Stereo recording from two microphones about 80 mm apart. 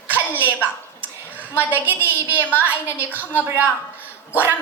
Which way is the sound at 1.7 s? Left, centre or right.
Right.